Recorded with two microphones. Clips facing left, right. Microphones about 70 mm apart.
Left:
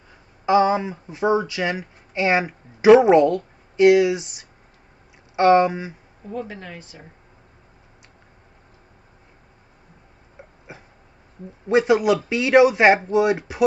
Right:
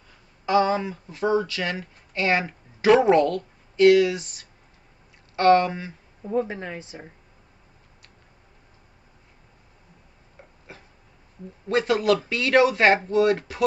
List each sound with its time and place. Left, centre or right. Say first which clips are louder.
0.5 s speech: left 3 dB; centre
6.2 s speech: right 5 dB; right
10.4 s a sound: left 5 dB; centre
11.7 s speech: left 4 dB; centre